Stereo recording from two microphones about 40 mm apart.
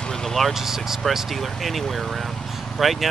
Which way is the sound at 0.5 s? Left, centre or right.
Centre.